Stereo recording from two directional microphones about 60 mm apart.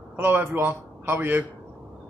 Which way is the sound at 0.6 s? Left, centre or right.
Right.